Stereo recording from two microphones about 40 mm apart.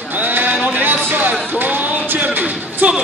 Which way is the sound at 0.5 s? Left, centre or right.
Right.